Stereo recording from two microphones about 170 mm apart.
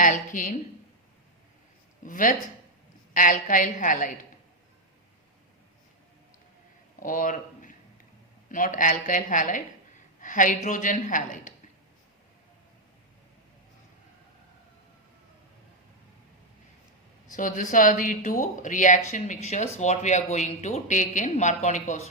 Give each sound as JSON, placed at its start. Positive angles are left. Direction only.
{"t": 0.0, "sound": "a woman's voice", "side_deg": 50}
{"t": 2.0, "sound": "speech", "side_deg": 50}
{"t": 7.0, "sound": "a sound", "side_deg": 50}
{"t": 8.4, "sound": "speech", "side_deg": 50}
{"t": 17.3, "sound": "speech", "side_deg": 50}